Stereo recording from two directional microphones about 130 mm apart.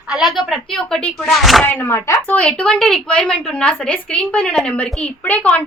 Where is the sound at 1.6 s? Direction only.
15° left (ahead or behind).